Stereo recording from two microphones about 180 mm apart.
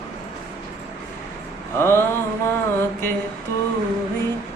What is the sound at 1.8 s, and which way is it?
Music, 15° left (ahead or behind).